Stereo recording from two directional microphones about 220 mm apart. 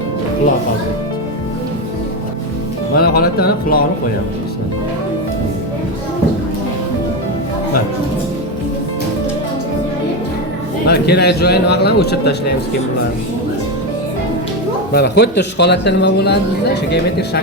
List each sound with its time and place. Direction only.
2.9 s speech: 45° left (ahead or behind)
10.8 s speech: 50° left (ahead or behind)
14.9 s speech: 50° left (ahead or behind)